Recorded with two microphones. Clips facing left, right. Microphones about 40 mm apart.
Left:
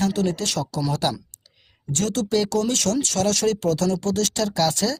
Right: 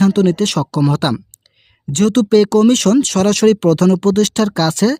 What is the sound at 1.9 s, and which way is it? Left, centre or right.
Speech, right.